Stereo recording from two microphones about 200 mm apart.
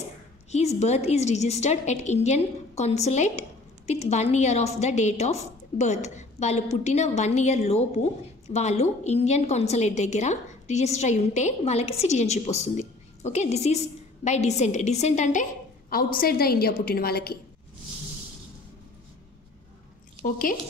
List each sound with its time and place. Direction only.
0.5 s a woman's voice: 35° left (ahead or behind)
15.9 s a woman's voice: 45° left (ahead or behind)
20.2 s a woman's voice: 45° left (ahead or behind)